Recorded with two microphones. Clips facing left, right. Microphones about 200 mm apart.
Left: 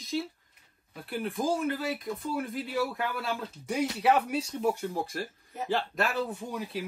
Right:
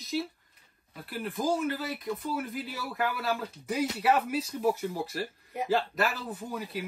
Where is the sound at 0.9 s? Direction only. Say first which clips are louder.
Left 2 dB; centre (ahead or behind).